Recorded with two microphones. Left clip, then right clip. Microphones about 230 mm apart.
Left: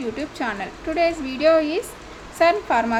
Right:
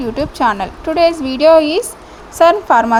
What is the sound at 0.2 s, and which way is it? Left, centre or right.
A woman's voice, right.